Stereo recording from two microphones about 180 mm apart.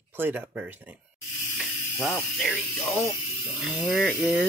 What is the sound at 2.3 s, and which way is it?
Speech, centre (ahead or behind).